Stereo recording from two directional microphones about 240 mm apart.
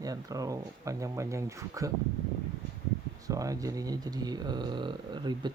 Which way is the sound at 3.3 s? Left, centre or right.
Centre.